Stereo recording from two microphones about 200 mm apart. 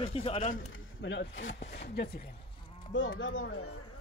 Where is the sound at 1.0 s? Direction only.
65° left (ahead or behind).